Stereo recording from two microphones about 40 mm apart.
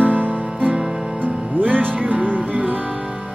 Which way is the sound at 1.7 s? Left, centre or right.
Right.